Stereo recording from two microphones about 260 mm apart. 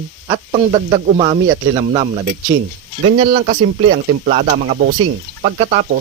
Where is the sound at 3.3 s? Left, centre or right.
Right.